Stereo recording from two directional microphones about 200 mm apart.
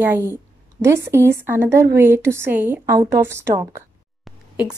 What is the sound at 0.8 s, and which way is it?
Speech, 10° right (ahead or behind).